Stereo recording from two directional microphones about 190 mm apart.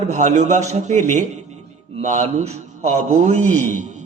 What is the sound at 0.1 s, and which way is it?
A man's voice, 40° right (ahead or behind).